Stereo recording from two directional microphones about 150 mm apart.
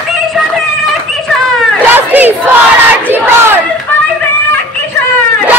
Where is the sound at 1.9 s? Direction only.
10° right (ahead or behind).